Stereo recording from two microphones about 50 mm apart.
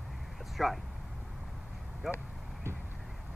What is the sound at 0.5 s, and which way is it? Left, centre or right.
Speech, centre.